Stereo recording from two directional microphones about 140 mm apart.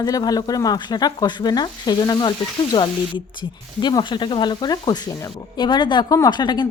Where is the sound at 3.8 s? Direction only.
30° left (ahead or behind).